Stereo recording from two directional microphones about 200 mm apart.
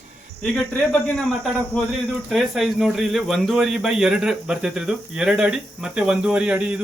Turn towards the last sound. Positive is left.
turn(degrees=-5)  # may be behind; listen again after turning